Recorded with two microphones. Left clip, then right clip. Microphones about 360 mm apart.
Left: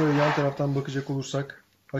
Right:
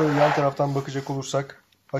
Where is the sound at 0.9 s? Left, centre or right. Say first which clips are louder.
Right 2 dB; centre.